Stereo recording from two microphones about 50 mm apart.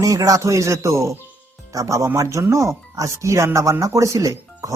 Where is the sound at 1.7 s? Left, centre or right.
Right.